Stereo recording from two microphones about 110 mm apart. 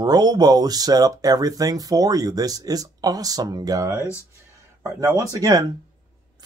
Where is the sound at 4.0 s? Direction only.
25° left (ahead or behind).